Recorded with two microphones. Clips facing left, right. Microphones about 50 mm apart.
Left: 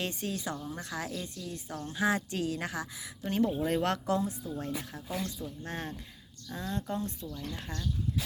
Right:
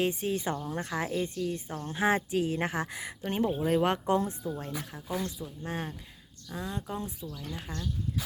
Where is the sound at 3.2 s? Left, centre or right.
Right.